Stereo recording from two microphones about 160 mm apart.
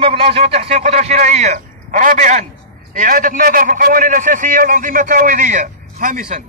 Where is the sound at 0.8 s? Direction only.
50° right (ahead or behind).